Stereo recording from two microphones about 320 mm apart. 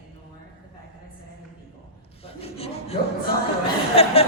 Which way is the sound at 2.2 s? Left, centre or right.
Centre.